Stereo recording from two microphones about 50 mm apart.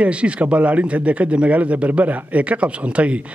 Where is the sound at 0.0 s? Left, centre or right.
Right.